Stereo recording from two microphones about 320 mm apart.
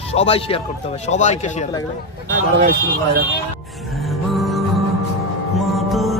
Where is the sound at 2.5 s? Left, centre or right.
Right.